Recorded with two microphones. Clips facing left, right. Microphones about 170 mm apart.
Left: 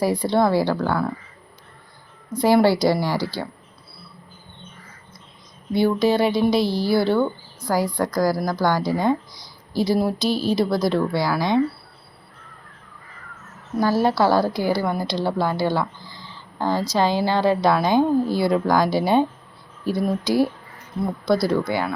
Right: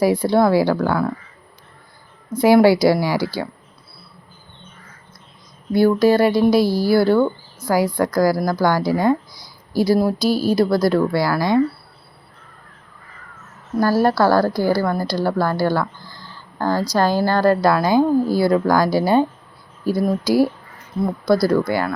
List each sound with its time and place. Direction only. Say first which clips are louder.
0.0 s a woman's voice: right 4 dB; 5° right (ahead or behind)
2.4 s a woman's voice: right 4 dB; 10° right (ahead or behind)
5.7 s a woman's voice: right 4 dB; 5° right (ahead or behind)
13.7 s speech: right 3 dB; 5° right (ahead or behind)
14.2 s speech: right 3 dB; 20° left (ahead or behind)
17.0 s speech: right 3 dB; centre (ahead or behind)